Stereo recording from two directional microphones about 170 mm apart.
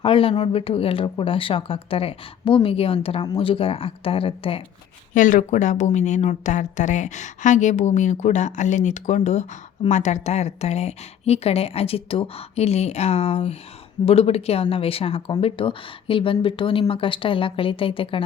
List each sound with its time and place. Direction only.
0.0 s speech: 30° left (ahead or behind)
5.1 s a woman's voice: 50° left (ahead or behind); by 18.2 s 30° left (ahead or behind)